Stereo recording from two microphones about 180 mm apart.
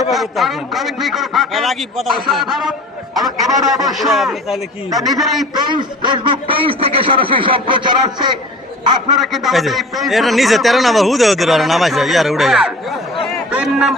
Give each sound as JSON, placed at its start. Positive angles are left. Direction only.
{"t": 0.0, "sound": "a man's voice", "side_deg": 0}
{"t": 5.5, "sound": "a man's voice", "side_deg": -25}
{"t": 9.1, "sound": "a man's voice", "side_deg": 0}